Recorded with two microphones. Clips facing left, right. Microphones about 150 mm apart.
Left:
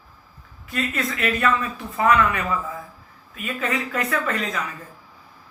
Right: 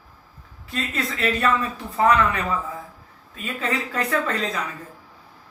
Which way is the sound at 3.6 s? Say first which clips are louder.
Even; 30° right (ahead or behind).